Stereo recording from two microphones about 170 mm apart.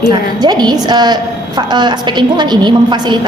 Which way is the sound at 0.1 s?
25° right (ahead or behind).